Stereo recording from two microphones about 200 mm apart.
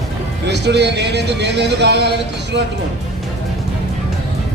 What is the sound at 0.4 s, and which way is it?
Speech, 60° right (ahead or behind).